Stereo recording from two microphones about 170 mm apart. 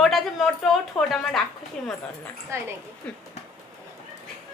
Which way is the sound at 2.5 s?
15° right (ahead or behind).